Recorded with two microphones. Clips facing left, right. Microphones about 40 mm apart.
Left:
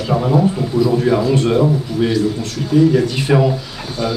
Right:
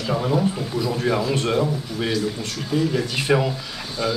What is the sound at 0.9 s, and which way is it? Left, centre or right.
Speech, centre.